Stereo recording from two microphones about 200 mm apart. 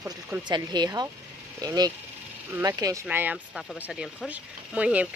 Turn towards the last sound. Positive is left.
turn(degrees=-5)  # may be behind; listen again after turning